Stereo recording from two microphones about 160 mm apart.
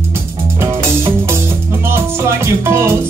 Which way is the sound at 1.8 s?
15° right (ahead or behind).